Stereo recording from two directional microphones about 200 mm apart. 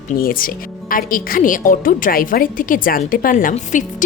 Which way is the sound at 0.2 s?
45° left (ahead or behind).